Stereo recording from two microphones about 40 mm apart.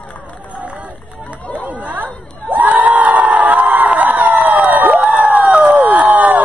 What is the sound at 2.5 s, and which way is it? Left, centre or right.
Crowd, right.